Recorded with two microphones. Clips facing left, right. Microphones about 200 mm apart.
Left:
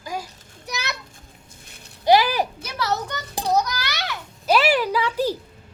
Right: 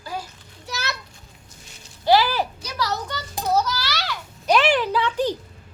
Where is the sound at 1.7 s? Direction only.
60° left (ahead or behind).